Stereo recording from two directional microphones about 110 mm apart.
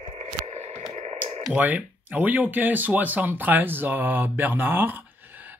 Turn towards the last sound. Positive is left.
turn(degrees=-20)  # may be behind; listen again after turning